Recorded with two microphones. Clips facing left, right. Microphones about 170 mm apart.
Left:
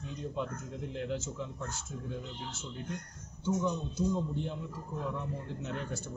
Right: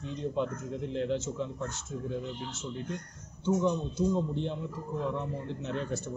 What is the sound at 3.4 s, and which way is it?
A man's voice, 25° right (ahead or behind).